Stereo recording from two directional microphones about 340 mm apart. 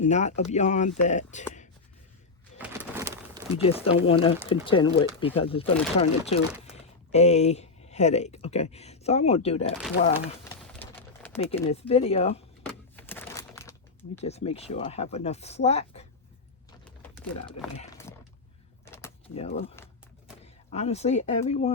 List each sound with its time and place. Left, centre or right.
0.0 s speech: centre
2.6 s pigeon: centre
3.5 s speech: centre
10.8 s pigeon: centre
11.3 s speech: centre
12.6 s a sound: centre
14.2 s speech: centre
17.7 s roaring cats: centre
18.9 s keys jangling: centre
19.7 s a sound: centre
20.4 s speech: centre